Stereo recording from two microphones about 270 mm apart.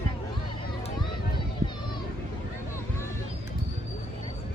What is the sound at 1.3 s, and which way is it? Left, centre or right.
Children playing, centre.